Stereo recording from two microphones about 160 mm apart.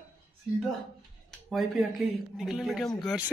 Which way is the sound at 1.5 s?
Centre (ahead or behind).